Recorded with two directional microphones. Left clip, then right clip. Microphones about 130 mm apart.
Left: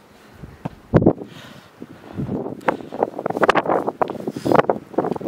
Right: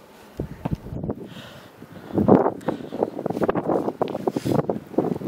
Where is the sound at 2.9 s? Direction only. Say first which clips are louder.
Left 3 dB; 40° left (ahead or behind).